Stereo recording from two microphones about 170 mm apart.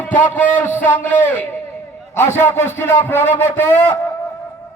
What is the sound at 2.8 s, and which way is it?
Speech, 10° left (ahead or behind).